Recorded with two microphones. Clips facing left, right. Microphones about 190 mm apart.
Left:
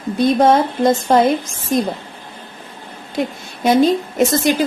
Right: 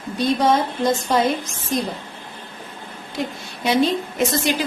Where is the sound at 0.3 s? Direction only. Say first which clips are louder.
Left 5 dB; 55° left (ahead or behind).